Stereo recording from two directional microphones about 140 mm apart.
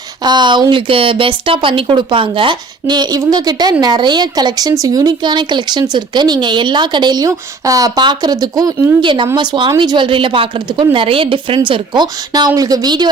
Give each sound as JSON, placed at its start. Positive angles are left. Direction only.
{"t": 0.3, "sound": "speech", "side_deg": -30}
{"t": 9.0, "sound": "speech", "side_deg": -35}